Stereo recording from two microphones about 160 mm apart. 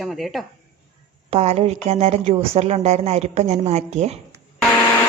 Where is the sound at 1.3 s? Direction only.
40° right (ahead or behind).